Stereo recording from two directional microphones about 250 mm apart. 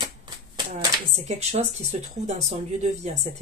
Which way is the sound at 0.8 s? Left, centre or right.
Right.